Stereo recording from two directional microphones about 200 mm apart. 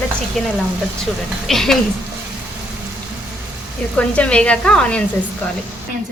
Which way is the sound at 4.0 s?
5° left (ahead or behind).